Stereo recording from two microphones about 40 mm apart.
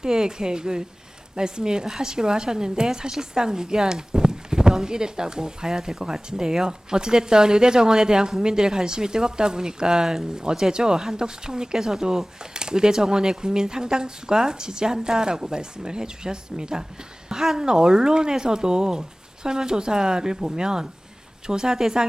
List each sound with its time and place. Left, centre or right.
0.0 s speech: centre